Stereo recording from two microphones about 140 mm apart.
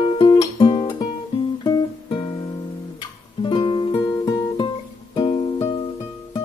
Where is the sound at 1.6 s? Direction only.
30° left (ahead or behind).